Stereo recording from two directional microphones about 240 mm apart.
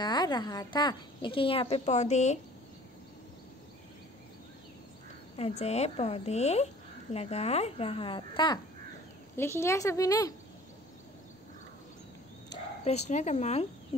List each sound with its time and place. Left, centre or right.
0.0 s a woman's voice: centre
5.3 s a woman's voice: left
12.4 s bow-wow: left
13.1 s a woman's voice: left